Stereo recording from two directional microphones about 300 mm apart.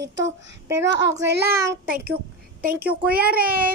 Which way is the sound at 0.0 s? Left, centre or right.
Right.